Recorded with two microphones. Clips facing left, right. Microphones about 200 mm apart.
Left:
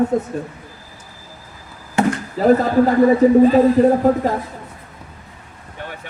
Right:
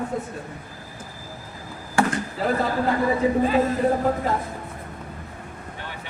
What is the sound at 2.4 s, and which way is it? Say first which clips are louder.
Speech: left 11 dB; 40° left (ahead or behind).